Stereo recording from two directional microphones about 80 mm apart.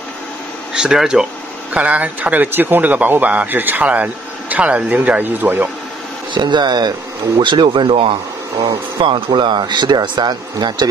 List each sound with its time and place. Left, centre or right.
0.7 s speech: centre
1.7 s speech: centre
6.3 s speech: right
7.3 s speech: right
9.0 s speech: right